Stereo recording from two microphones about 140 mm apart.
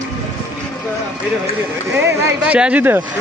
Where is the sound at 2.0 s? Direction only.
15° right (ahead or behind).